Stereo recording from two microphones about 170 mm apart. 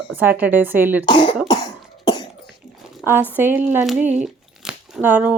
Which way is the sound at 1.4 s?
25° left (ahead or behind).